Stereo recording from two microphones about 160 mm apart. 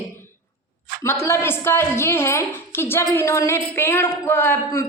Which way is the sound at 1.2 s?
15° left (ahead or behind).